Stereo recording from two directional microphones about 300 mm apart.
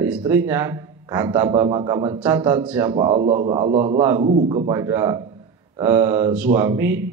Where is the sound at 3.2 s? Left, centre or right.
Right.